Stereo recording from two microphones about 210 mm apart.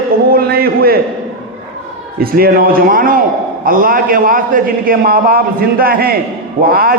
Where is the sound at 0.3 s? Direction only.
45° right (ahead or behind).